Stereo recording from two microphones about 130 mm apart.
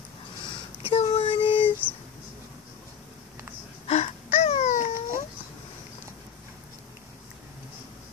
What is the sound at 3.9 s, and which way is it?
Wail, 55° left (ahead or behind).